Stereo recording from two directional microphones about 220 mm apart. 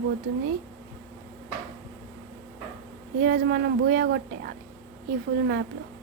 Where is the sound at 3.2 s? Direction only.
45° right (ahead or behind).